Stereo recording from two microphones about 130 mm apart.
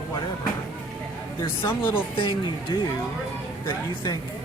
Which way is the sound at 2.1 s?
40° left (ahead or behind).